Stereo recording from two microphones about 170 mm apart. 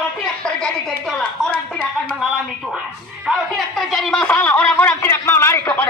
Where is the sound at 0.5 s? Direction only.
5° left (ahead or behind).